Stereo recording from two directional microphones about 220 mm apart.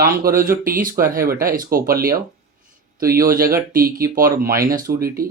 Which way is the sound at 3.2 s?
40° right (ahead or behind).